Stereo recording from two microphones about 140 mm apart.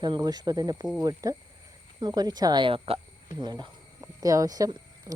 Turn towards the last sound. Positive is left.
turn(degrees=-25)  # may be behind; listen again after turning